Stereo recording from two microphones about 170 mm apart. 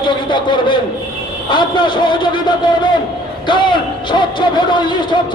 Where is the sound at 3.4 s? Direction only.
30° left (ahead or behind).